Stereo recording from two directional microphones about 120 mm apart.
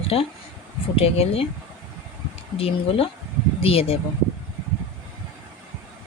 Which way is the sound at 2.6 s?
55° left (ahead or behind).